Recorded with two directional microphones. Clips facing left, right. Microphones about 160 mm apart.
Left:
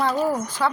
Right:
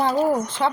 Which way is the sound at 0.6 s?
25° right (ahead or behind).